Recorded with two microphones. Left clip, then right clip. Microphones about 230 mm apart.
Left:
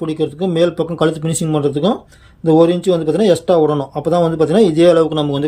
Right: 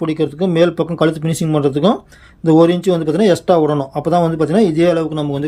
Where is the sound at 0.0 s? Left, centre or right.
Centre.